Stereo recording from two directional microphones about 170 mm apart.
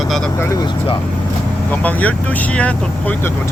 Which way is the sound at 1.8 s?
10° left (ahead or behind).